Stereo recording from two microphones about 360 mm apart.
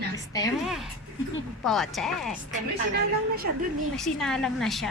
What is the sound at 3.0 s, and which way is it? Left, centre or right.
Speech, right.